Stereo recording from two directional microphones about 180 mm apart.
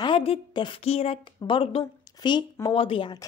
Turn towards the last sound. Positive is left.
turn(degrees=25)  # may be behind; listen again after turning